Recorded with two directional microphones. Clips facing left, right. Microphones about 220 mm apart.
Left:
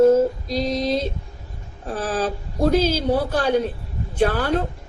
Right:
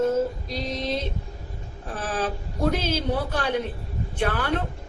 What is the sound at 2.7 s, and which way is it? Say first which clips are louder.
A woman's voice: left 7 dB; 35° left (ahead or behind).